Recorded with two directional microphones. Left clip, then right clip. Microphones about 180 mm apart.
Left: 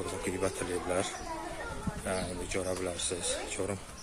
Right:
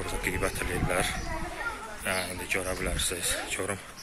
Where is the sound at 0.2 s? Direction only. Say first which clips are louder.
Right 4 dB; 10° left (ahead or behind).